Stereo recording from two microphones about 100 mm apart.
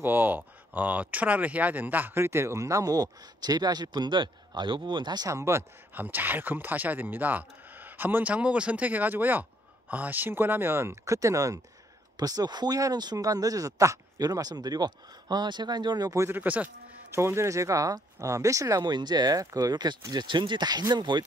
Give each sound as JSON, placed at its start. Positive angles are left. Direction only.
{"t": 0.0, "sound": "speech", "side_deg": -20}
{"t": 5.3, "sound": "speech", "side_deg": -30}
{"t": 5.9, "sound": "speech", "side_deg": -20}
{"t": 16.3, "sound": "speech", "side_deg": -20}
{"t": 18.9, "sound": "speech", "side_deg": -45}